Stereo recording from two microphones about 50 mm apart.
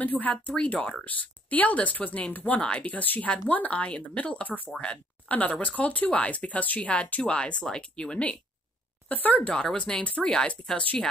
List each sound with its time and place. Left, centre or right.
0.0 s speech: left
9.1 s speech: left
9.5 s speech: centre
10.0 s speech: left